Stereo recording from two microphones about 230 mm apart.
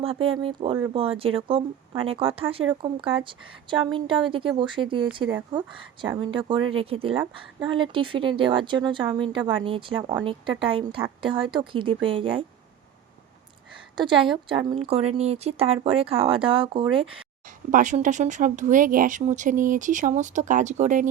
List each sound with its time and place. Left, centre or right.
0.0 s speech: right
13.9 s speech: right
17.7 s speech: right